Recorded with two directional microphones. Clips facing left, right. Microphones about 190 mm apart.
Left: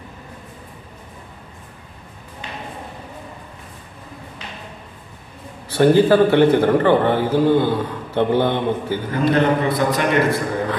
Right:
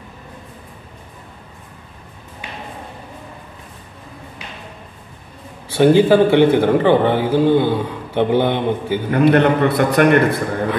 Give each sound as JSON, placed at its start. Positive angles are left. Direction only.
{"t": 5.8, "sound": "a man's voice", "side_deg": -15}
{"t": 9.1, "sound": "a man's voice", "side_deg": -65}